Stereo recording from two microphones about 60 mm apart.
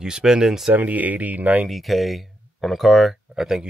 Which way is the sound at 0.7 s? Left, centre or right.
Right.